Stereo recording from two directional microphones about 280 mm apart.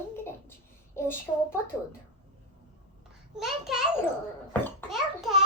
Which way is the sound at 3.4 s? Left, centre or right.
Centre.